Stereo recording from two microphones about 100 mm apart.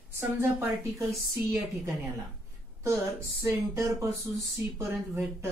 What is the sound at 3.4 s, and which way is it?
A woman's voice, 30° right (ahead or behind).